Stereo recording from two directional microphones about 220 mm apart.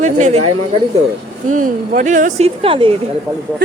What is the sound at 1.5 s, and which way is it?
Speech, 35° right (ahead or behind).